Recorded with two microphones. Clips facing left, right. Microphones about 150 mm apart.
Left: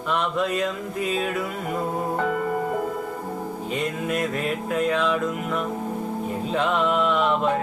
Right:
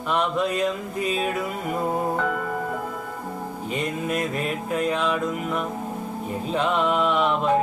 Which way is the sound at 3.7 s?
Centre (ahead or behind).